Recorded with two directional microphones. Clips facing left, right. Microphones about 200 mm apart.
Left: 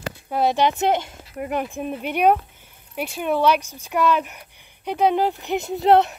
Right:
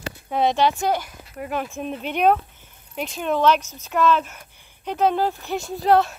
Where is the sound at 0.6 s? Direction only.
20° left (ahead or behind).